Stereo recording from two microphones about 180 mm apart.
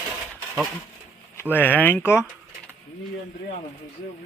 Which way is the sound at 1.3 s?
10° left (ahead or behind).